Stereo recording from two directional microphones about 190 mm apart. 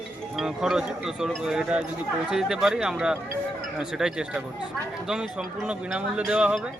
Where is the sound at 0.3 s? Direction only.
Centre (ahead or behind).